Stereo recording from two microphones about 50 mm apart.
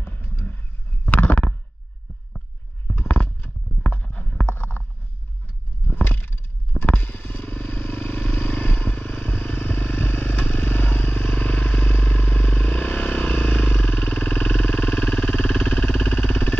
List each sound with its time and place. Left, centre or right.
0.0 s a sound: left
1.0 s stomach rumble: left
3.8 s clip-clop: left
5.9 s vehicle: left